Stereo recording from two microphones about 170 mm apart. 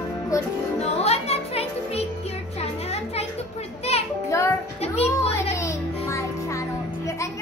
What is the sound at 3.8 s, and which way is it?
Music, 35° left (ahead or behind).